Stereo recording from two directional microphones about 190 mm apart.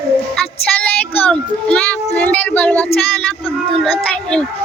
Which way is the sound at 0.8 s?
10° left (ahead or behind).